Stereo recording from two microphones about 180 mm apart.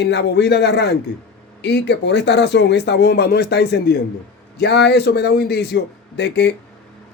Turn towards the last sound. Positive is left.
turn(degrees=70)  # may be behind; listen again after turning